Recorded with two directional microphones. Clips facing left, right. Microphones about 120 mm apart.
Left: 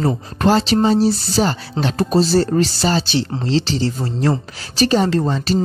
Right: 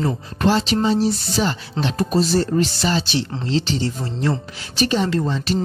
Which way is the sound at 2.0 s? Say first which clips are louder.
Left 4 dB; 30° left (ahead or behind).